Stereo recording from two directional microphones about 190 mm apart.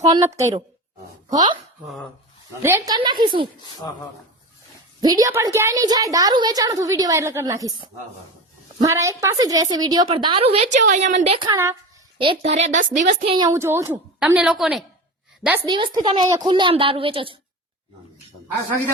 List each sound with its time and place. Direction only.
0.0 s a woman's voice: 20° right (ahead or behind)
2.6 s a woman's voice: 15° right (ahead or behind)
3.8 s speech: 20° left (ahead or behind)
4.9 s a woman's voice: 20° right (ahead or behind); by 11.3 s 40° right (ahead or behind)
11.3 s a woman's voice: 15° right (ahead or behind)
12.1 s a woman's voice: 30° right (ahead or behind)
13.3 s a woman's voice: 20° right (ahead or behind); by 14.8 s centre (ahead or behind)
15.6 s a woman's voice: 25° right (ahead or behind)